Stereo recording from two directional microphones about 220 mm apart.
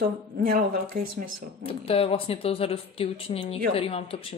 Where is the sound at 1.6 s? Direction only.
25° left (ahead or behind).